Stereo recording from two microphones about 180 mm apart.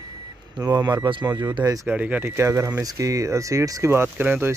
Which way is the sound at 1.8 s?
10° right (ahead or behind).